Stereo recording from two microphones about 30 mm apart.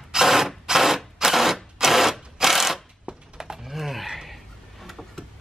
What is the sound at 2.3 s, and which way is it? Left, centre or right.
Mechanisms, centre.